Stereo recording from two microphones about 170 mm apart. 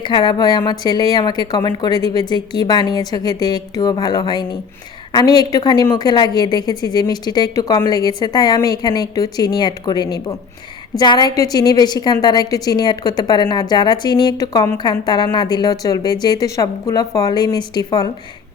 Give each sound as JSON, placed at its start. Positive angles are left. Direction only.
{"t": 0.0, "sound": "a woman's voice", "side_deg": 25}